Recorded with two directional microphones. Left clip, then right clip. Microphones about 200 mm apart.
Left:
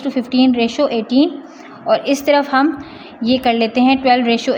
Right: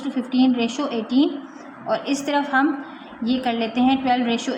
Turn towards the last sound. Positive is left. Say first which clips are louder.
# left 8 dB
turn(degrees=35)  # may be behind; listen again after turning